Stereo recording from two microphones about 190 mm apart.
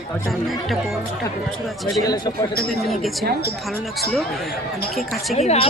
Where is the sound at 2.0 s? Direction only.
20° left (ahead or behind).